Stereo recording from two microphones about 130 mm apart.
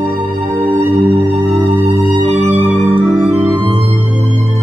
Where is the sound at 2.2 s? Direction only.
60° right (ahead or behind).